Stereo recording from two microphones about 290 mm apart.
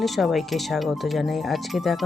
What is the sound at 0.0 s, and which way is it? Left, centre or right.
Speech, centre.